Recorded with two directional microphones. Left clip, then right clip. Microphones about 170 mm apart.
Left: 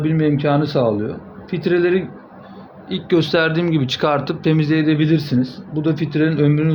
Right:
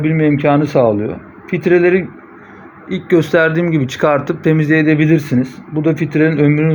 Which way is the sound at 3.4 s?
10° right (ahead or behind).